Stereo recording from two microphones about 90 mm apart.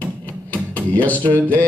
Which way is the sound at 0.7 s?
20° left (ahead or behind).